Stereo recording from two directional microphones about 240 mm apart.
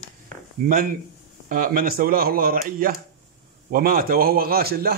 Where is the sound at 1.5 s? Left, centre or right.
Right.